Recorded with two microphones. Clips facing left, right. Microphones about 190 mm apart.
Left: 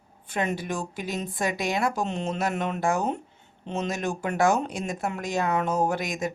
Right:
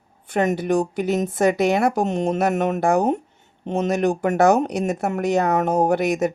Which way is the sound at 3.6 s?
55° right (ahead or behind).